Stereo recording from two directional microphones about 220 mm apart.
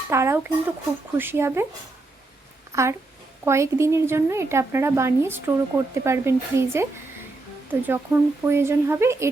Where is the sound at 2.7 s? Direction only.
15° right (ahead or behind).